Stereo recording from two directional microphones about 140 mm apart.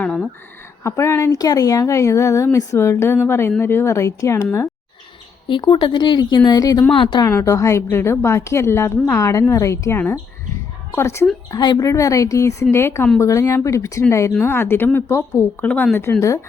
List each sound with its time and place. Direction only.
0.0 s a sound: 5° left (ahead or behind)
0.9 s a woman's voice: 20° left (ahead or behind)
5.5 s speech: 35° left (ahead or behind)
7.3 s a woman's voice: 20° left (ahead or behind)
11.5 s a woman's voice: 30° left (ahead or behind)